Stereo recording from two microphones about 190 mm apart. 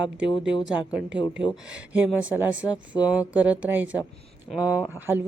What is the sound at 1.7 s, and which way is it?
Speech, 5° right (ahead or behind).